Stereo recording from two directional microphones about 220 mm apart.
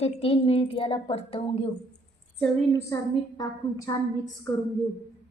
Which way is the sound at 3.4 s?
15° left (ahead or behind).